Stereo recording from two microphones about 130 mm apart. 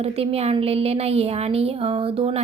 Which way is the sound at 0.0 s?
50° right (ahead or behind).